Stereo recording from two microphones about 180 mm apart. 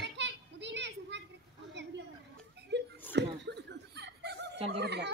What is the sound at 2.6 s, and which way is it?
Laughter, 75° right (ahead or behind).